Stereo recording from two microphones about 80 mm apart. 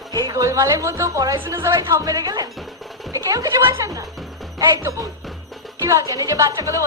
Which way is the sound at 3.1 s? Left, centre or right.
Right.